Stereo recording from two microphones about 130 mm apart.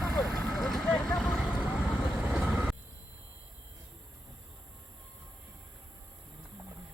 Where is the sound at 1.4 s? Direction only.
10° right (ahead or behind).